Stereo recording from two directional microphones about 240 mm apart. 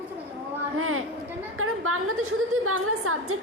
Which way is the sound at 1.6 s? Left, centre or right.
Right.